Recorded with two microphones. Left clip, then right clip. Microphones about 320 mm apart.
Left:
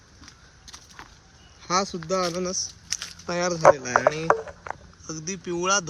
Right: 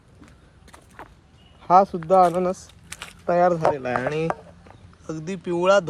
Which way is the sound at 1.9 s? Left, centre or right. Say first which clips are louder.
Right 9 dB; centre.